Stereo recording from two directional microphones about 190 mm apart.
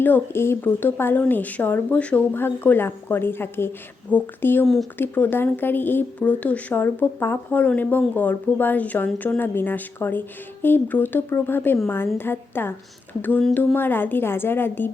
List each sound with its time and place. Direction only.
0.0 s speech: 10° left (ahead or behind)